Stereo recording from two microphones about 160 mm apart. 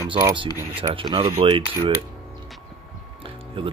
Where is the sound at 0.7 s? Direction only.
35° right (ahead or behind).